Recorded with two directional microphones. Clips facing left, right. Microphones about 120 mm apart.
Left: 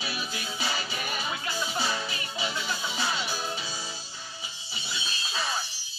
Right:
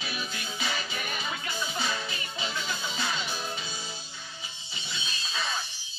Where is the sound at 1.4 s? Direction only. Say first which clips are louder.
Left 2 dB; 35° left (ahead or behind).